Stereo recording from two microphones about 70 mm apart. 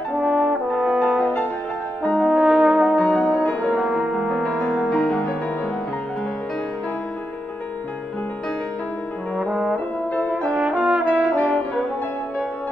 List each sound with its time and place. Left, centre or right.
0.2 s brass instrument: centre
2.3 s brass instrument: centre
3.0 s music: centre
3.7 s music: centre
4.3 s music: centre
10.7 s brass instrument: centre
11.3 s french horn: left